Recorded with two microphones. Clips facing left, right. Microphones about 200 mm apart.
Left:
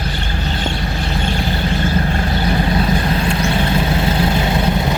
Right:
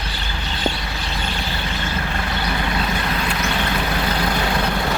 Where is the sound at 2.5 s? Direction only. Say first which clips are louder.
Left 7 dB; 30° left (ahead or behind).